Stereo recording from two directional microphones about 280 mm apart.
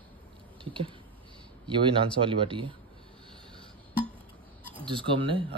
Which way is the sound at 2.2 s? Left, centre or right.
Centre.